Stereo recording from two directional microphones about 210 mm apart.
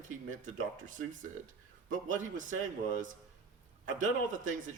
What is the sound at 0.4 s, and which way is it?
A man's voice, 35° right (ahead or behind).